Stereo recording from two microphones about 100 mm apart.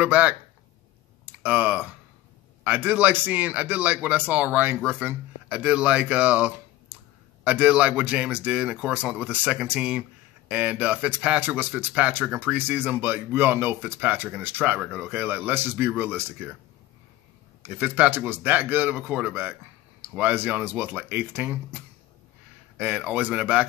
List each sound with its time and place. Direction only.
0.0 s speech: 15° right (ahead or behind)
17.6 s speech: 20° right (ahead or behind)
22.8 s speech: 15° right (ahead or behind)